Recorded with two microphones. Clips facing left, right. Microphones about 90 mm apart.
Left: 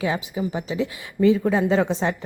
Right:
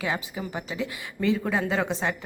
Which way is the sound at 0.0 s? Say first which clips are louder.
Left 5 dB; 25° left (ahead or behind).